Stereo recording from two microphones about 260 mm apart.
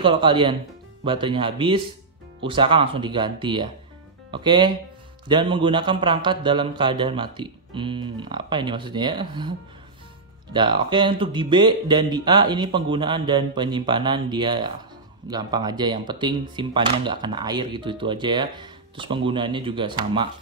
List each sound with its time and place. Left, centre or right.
0.0 s speech: centre
10.5 s speech: centre